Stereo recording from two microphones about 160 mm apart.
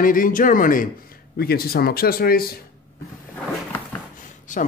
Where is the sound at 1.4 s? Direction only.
75° left (ahead or behind).